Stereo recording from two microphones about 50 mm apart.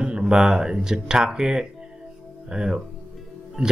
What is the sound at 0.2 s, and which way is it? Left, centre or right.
Speech, centre.